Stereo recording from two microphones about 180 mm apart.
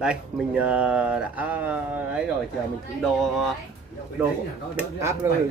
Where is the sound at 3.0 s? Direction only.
Centre (ahead or behind).